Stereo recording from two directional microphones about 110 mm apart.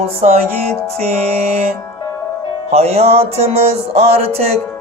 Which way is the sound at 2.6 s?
70° right (ahead or behind).